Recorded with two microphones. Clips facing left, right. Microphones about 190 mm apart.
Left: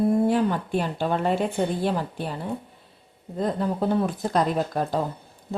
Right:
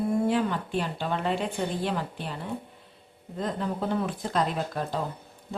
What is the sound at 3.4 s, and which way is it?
Speech, 35° left (ahead or behind).